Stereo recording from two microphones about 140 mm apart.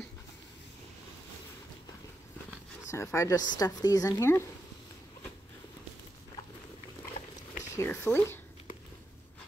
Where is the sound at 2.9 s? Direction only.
20° left (ahead or behind).